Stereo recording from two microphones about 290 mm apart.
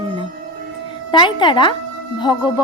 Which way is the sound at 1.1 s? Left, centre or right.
Centre.